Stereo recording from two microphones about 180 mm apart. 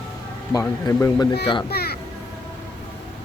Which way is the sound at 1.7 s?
60° left (ahead or behind).